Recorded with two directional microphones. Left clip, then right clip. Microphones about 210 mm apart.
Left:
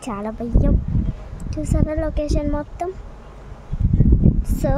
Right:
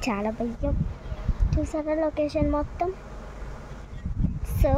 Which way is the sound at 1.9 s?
5° left (ahead or behind).